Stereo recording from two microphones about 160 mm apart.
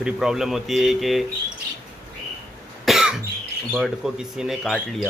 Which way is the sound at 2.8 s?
5° right (ahead or behind).